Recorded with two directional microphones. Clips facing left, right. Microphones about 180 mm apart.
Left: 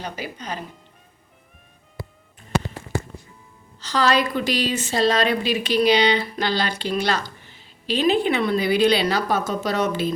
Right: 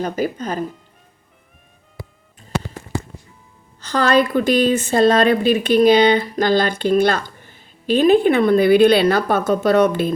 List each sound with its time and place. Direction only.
0.0 s a woman's voice: 50° right (ahead or behind)
3.8 s a woman's voice: 55° right (ahead or behind)